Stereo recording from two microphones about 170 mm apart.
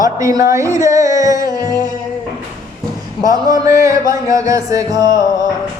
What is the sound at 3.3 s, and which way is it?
Speech, 20° right (ahead or behind).